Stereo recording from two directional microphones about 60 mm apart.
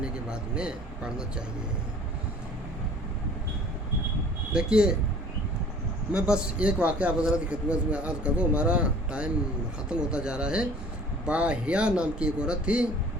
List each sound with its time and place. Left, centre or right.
0.0 s a man's voice: centre
4.5 s speech: centre
6.1 s a man's voice: centre